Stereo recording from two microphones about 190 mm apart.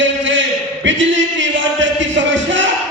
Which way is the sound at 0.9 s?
75° right (ahead or behind).